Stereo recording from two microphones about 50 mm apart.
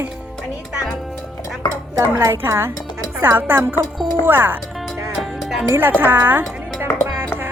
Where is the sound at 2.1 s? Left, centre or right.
Right.